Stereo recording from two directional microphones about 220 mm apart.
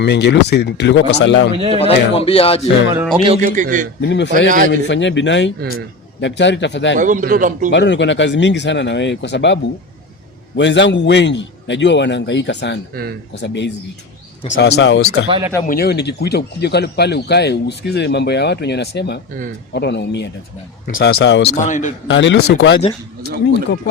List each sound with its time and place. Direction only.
0.0 s a man's voice: 50° left (ahead or behind)
1.7 s speech: 25° left (ahead or behind)
2.9 s speech: 10° right (ahead or behind)
3.2 s a man's voice: 30° right (ahead or behind)
4.0 s a man's voice: 55° left (ahead or behind)
4.4 s a man's voice: 35° right (ahead or behind)
4.7 s a man's voice: 55° left (ahead or behind)
7.0 s a man's voice: 35° right (ahead or behind)
7.7 s a man's voice: 55° left (ahead or behind)
10.6 s a man's voice: 55° left (ahead or behind)
15.3 s speech: 15° right (ahead or behind)
15.6 s a man's voice: 45° left (ahead or behind)
21.6 s a man's voice: 35° left (ahead or behind)
22.0 s speech: 55° left (ahead or behind)